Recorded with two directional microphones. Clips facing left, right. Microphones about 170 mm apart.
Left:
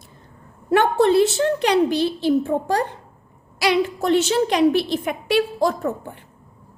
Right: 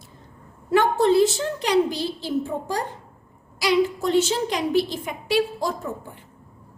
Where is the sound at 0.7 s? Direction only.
65° left (ahead or behind).